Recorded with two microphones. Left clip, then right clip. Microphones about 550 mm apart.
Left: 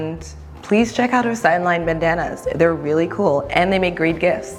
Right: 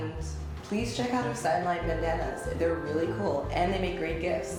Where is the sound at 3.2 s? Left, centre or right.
Left.